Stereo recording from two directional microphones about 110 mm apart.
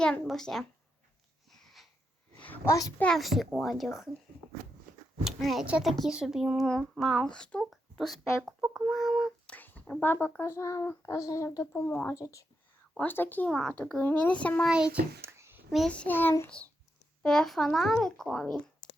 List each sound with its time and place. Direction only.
0.0 s speech: 5° left (ahead or behind)
1.5 s a sound: centre (ahead or behind)
2.6 s a child's voice: 30° left (ahead or behind)
3.0 s speech: 5° left (ahead or behind)
5.2 s speech: centre (ahead or behind)
9.6 s a sound: 15° left (ahead or behind)
10.0 s speech: 20° left (ahead or behind)
13.0 s a child's voice: 15° left (ahead or behind)
15.2 s a sound: 20° right (ahead or behind)
15.9 s a child's voice: 15° left (ahead or behind)
17.2 s speech: 5° left (ahead or behind)